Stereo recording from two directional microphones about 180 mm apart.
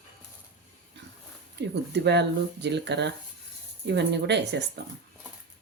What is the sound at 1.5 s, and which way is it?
Speech, 70° right (ahead or behind).